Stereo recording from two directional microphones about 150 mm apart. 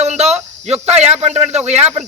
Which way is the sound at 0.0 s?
45° right (ahead or behind).